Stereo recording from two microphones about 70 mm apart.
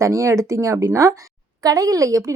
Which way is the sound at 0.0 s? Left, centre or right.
Right.